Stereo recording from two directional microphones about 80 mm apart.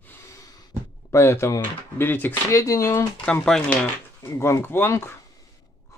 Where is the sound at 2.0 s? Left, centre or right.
Left.